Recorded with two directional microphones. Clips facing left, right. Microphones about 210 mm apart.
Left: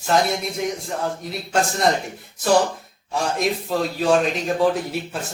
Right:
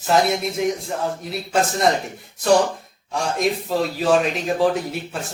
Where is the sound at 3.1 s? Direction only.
Centre (ahead or behind).